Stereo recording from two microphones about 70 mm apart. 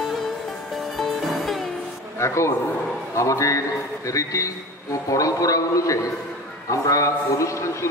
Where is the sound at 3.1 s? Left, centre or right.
Left.